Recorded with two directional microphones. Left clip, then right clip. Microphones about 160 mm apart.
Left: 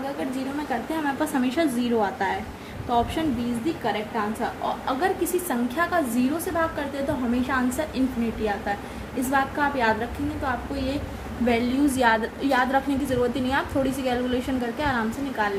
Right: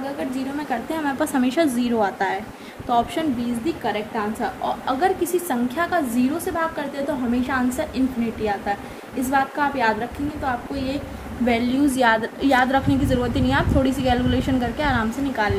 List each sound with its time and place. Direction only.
0.7 s a woman's voice: 35° right (ahead or behind)
3.8 s a woman's voice: 25° right (ahead or behind)
7.4 s a woman's voice: 10° right (ahead or behind)
9.3 s a woman's voice: 15° right (ahead or behind)
11.4 s a woman's voice: 25° right (ahead or behind)